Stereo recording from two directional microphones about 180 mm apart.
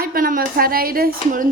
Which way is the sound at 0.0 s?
55° right (ahead or behind).